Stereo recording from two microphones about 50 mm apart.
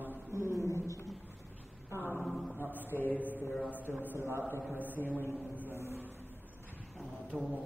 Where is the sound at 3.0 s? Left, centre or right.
Left.